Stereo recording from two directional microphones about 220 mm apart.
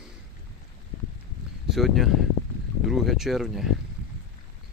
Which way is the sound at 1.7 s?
Centre (ahead or behind).